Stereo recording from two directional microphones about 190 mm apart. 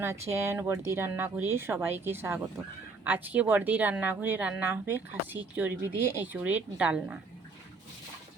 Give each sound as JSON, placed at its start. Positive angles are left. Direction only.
{"t": 0.0, "sound": "speech", "side_deg": -15}